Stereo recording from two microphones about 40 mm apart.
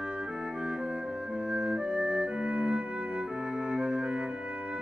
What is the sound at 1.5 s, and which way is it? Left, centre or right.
Music, right.